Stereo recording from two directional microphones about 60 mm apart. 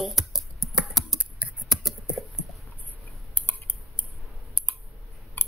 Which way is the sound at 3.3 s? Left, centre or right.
Left.